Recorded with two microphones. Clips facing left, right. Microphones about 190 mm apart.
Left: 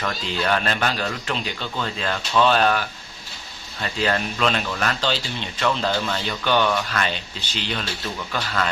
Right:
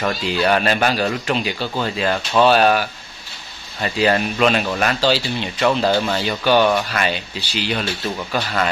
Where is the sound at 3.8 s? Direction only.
15° right (ahead or behind).